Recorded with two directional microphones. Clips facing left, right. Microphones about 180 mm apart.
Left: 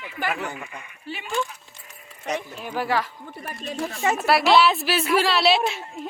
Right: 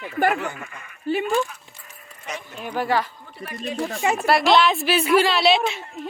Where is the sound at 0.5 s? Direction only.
15° left (ahead or behind).